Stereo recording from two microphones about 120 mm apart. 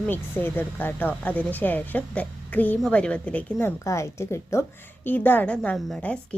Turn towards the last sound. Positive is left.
turn(degrees=5)  # may be behind; listen again after turning